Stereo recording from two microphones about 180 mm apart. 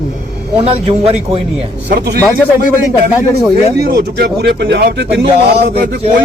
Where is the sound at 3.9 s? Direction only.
65° right (ahead or behind).